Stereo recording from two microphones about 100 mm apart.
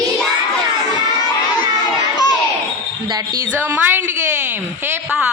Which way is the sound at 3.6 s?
20° right (ahead or behind).